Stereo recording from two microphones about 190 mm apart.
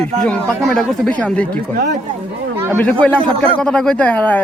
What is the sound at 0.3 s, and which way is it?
Speech, centre (ahead or behind).